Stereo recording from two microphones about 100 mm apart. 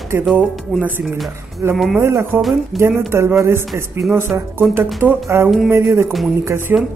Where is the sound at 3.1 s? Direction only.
25° right (ahead or behind).